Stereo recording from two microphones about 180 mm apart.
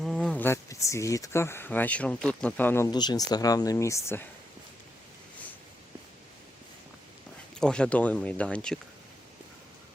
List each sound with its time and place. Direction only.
0.0 s speech: 5° left (ahead or behind)
7.5 s speech: 5° left (ahead or behind)